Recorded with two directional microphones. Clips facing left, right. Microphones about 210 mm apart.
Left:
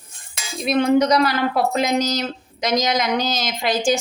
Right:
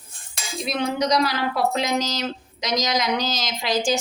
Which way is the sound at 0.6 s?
55° left (ahead or behind).